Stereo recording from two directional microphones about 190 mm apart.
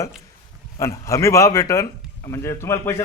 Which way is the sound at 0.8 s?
15° left (ahead or behind).